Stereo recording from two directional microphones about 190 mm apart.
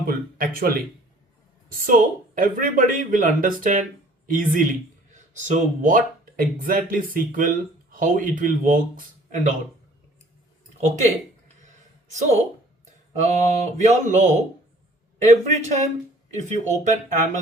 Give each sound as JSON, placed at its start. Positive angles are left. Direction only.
{"t": 0.0, "sound": "speech", "side_deg": -50}
{"t": 13.1, "sound": "mantra", "side_deg": -40}